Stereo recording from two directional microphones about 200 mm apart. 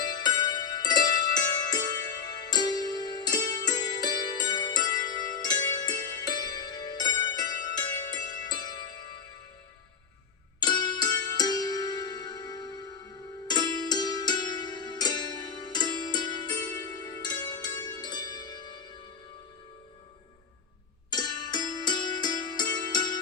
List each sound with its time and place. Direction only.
0.0 s music: 20° left (ahead or behind)
10.6 s music: 20° left (ahead or behind)
17.0 s zither: 20° left (ahead or behind)
21.1 s music: 20° left (ahead or behind)